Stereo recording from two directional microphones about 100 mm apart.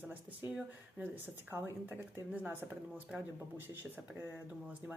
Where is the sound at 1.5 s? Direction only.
20° right (ahead or behind).